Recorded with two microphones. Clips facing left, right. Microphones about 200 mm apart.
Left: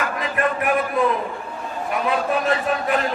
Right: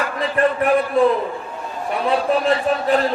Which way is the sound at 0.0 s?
35° right (ahead or behind).